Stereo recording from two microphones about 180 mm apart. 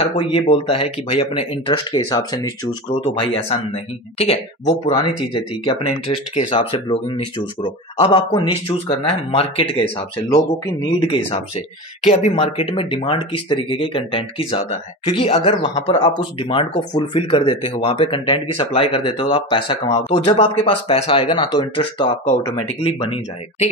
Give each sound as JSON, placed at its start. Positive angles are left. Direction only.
{"t": 0.0, "sound": "speech", "side_deg": 30}